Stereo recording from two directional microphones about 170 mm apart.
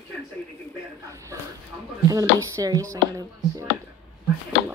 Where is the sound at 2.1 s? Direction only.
20° right (ahead or behind).